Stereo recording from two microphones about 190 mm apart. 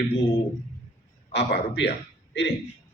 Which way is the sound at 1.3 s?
65° left (ahead or behind).